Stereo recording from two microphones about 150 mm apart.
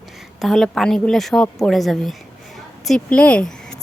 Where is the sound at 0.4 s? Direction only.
Centre (ahead or behind).